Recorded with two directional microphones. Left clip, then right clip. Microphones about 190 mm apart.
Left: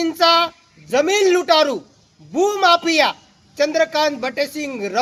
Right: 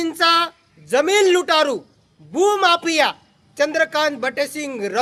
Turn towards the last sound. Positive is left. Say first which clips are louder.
# left 1 dB
turn(degrees=-20)  # may be behind; listen again after turning